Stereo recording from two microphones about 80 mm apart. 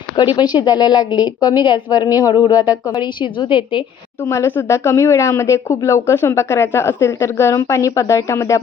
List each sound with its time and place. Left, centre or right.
0.3 s a woman's voice: left
4.3 s a woman's voice: left